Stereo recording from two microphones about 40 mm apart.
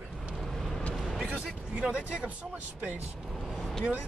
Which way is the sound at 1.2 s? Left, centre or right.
Right.